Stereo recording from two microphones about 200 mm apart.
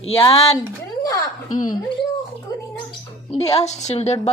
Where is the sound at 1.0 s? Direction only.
15° left (ahead or behind).